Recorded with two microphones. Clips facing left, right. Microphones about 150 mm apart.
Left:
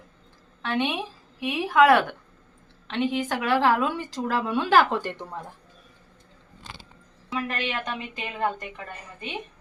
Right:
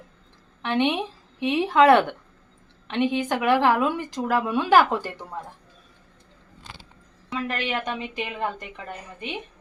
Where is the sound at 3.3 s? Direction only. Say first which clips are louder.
Right 2 dB; 15° right (ahead or behind).